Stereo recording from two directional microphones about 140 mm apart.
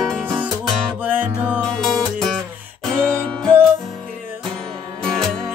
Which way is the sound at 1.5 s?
5° left (ahead or behind).